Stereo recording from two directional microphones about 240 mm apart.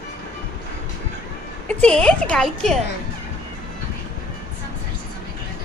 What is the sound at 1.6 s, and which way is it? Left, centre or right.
A woman's voice, centre.